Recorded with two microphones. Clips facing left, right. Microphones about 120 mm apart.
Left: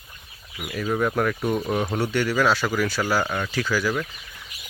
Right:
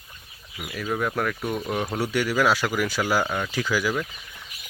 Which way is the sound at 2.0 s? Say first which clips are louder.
Right 1 dB; 10° right (ahead or behind).